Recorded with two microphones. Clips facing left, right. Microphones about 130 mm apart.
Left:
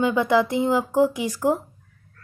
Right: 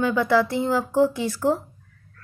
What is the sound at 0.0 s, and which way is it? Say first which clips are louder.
A woman's voice: left 1 dB; 20° left (ahead or behind).